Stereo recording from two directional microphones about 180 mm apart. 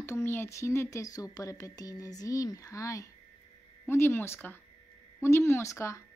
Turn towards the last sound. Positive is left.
turn(degrees=15)  # may be behind; listen again after turning